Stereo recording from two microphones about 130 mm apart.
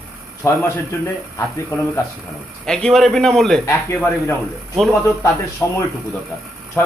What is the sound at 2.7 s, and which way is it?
Speech, 5° left (ahead or behind).